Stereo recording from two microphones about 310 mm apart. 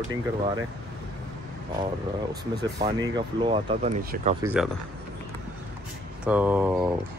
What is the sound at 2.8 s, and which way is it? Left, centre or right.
Speech, centre.